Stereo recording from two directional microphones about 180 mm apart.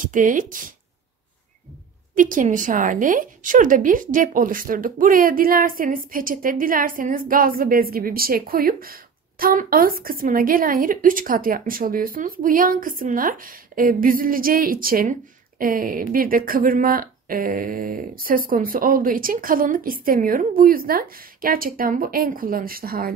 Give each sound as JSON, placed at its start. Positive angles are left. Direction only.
{"t": 0.0, "sound": "a woman's voice", "side_deg": -45}
{"t": 2.1, "sound": "a woman's voice", "side_deg": -50}